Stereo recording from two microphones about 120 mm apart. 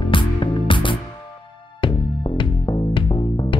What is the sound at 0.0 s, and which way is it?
Music, 45° left (ahead or behind).